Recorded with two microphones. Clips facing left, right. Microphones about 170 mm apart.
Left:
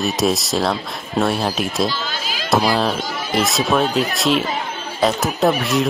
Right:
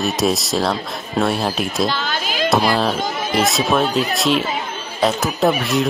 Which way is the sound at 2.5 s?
Centre (ahead or behind).